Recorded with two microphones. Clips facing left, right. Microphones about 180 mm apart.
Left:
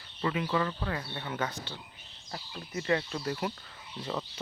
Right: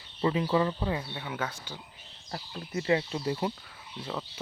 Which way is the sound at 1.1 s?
5° right (ahead or behind).